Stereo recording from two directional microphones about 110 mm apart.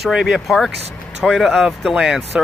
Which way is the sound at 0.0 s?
5° right (ahead or behind).